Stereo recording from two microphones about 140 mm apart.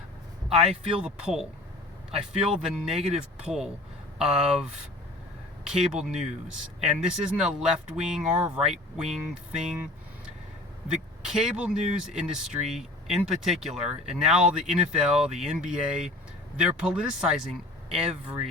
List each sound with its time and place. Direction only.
0.7 s speech: 40° right (ahead or behind)
1.0 s speech: 5° right (ahead or behind)
2.9 s speech: 45° right (ahead or behind)
3.2 s speech: 5° right (ahead or behind)
11.3 s speech: 5° right (ahead or behind)
17.9 s speech: 50° right (ahead or behind)